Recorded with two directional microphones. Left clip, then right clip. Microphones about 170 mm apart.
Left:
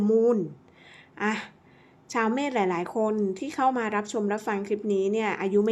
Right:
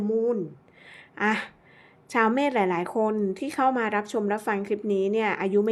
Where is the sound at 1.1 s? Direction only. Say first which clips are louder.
Right 3 dB; 15° right (ahead or behind).